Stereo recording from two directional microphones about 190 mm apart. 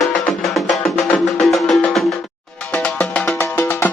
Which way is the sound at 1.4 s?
Centre (ahead or behind).